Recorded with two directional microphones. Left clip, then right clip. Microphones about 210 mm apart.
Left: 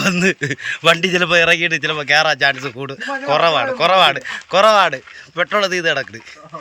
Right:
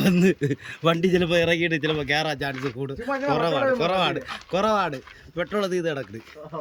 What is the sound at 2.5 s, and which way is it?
Speech, 25° left (ahead or behind).